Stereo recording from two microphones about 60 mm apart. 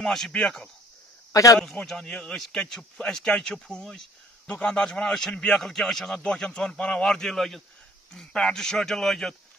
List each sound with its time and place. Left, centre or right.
0.0 s a man's voice: centre
1.3 s a man's voice: left
1.8 s a man's voice: centre
4.5 s a man's voice: centre
6.1 s a man's voice: centre